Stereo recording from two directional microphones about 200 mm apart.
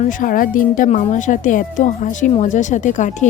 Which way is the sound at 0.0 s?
40° left (ahead or behind).